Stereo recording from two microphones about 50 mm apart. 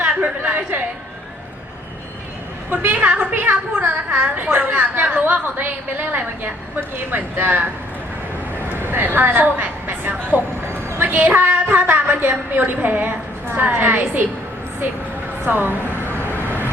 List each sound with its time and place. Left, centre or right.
0.2 s a woman's voice: right
2.6 s a woman's voice: right
8.8 s a woman's voice: right
15.4 s a woman's voice: right
16.0 s vehicle: left